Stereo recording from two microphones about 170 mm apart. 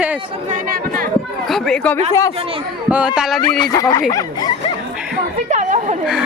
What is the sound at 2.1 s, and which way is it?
Speech, 15° left (ahead or behind).